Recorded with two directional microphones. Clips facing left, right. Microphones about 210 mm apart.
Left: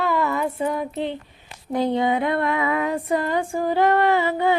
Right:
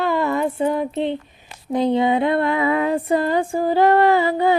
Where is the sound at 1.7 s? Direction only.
20° right (ahead or behind); by 4.6 s 35° right (ahead or behind).